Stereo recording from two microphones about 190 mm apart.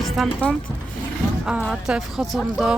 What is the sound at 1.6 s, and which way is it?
Speech, centre (ahead or behind).